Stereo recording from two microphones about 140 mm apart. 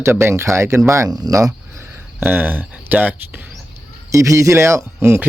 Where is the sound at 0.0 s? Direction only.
20° right (ahead or behind).